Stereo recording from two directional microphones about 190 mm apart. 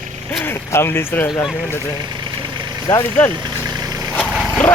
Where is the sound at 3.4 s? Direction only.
20° right (ahead or behind).